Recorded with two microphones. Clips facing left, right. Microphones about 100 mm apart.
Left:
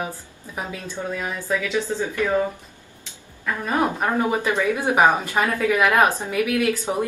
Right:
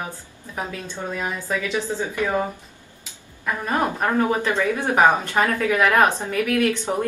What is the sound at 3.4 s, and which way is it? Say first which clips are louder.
Speech: even; 15° right (ahead or behind).